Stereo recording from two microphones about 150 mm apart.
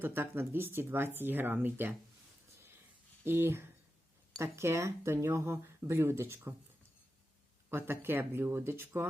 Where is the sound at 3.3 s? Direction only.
15° right (ahead or behind).